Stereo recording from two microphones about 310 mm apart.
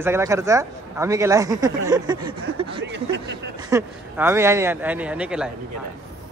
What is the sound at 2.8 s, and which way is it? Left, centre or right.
Speech, right.